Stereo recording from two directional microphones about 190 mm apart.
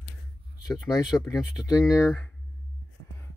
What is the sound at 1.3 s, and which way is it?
Speech, 20° left (ahead or behind).